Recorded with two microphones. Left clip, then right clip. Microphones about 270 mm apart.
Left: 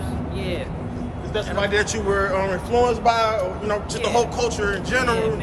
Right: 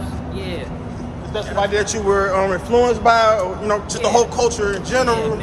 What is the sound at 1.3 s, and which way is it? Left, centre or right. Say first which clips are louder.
A man's voice: right 2 dB; centre.